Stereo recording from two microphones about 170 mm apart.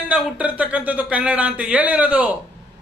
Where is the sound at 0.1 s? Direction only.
10° right (ahead or behind).